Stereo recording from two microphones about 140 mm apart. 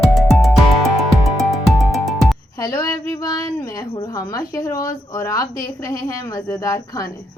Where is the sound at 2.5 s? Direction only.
25° left (ahead or behind).